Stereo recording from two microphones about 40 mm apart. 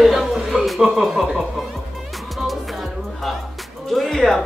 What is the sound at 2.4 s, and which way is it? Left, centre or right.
Music, centre.